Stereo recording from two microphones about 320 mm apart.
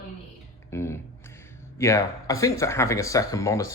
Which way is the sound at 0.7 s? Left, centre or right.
Centre.